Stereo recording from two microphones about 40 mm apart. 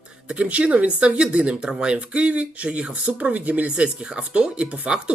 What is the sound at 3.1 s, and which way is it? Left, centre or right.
Speech, right.